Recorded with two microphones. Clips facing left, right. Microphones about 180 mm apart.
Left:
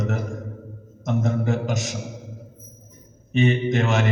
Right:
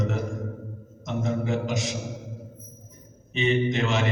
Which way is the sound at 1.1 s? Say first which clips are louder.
Left 3 dB; 45° left (ahead or behind).